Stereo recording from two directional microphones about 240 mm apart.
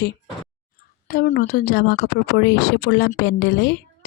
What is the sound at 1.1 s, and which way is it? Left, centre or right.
A woman's voice, left.